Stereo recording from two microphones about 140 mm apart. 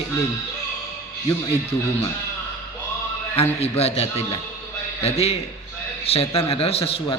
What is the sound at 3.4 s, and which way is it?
A man's voice, 50° left (ahead or behind).